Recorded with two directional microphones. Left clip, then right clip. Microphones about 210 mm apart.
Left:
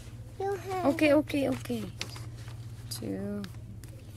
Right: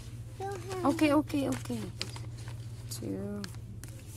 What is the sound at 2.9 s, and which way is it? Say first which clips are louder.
Speech: left 2 dB; 20° left (ahead or behind).